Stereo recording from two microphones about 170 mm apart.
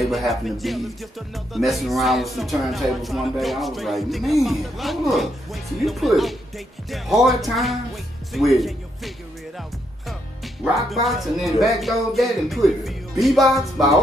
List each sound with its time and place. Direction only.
0.1 s speech: centre (ahead or behind)
10.6 s speech: centre (ahead or behind)